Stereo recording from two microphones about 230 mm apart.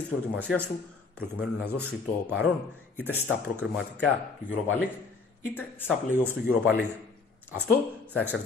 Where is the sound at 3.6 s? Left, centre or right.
Centre.